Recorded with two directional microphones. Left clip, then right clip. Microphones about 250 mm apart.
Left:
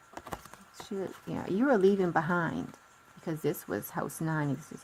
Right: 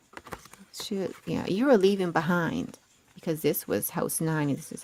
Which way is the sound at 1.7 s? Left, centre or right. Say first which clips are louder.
Right 3 dB; right.